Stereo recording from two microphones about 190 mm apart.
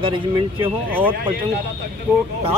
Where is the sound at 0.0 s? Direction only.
25° right (ahead or behind).